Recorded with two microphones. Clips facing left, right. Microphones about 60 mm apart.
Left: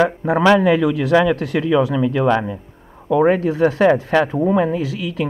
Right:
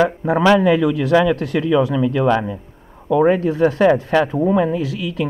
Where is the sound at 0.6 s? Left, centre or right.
Left.